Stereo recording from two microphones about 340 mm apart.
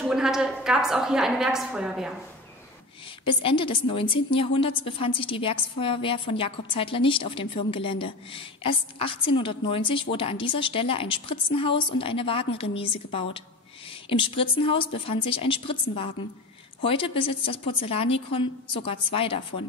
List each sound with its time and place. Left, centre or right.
0.0 s a woman's voice: centre
3.3 s a woman's voice: centre